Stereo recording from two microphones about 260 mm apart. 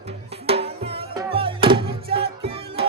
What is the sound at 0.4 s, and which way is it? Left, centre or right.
Music, right.